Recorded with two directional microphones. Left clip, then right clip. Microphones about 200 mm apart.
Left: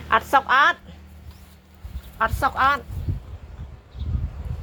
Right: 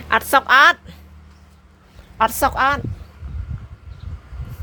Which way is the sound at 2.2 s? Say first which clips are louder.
Right 4 dB; 75° right (ahead or behind).